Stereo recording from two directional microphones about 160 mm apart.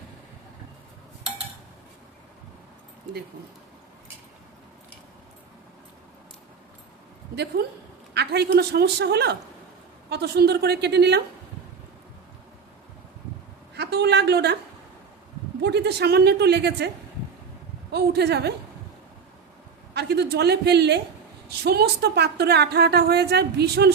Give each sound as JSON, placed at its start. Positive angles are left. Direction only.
{"t": 7.6, "sound": "a woman's voice", "side_deg": -80}
{"t": 13.7, "sound": "a sound", "side_deg": -90}
{"t": 15.6, "sound": "a woman's voice", "side_deg": -90}
{"t": 17.9, "sound": "a woman's voice", "side_deg": -90}
{"t": 19.9, "sound": "a woman's voice", "side_deg": -90}